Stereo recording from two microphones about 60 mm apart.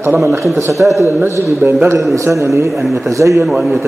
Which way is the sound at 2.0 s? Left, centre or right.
Right.